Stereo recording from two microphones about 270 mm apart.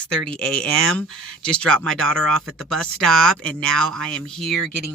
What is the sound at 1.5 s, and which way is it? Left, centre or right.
Speech, centre.